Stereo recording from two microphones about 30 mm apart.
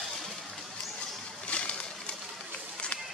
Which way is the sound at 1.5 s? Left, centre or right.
Left.